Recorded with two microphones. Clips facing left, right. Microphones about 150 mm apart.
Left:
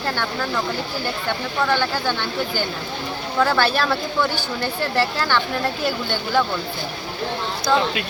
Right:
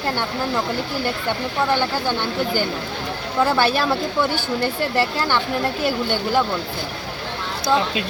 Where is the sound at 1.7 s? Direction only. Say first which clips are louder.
Right 1 dB; 15° right (ahead or behind).